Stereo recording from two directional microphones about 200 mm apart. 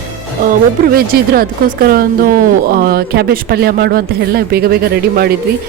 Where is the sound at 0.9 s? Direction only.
50° right (ahead or behind).